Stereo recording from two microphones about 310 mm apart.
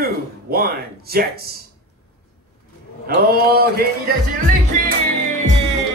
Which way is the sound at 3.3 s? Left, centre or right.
Right.